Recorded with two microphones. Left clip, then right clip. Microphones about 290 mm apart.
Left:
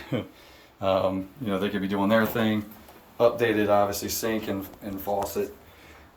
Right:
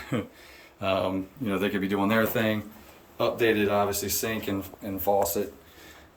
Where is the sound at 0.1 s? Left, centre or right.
Centre.